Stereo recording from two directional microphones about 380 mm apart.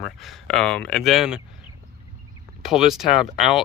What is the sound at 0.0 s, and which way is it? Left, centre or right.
Speech, centre.